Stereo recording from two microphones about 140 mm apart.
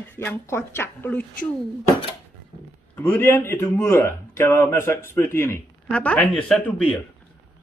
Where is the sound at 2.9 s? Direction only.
15° left (ahead or behind).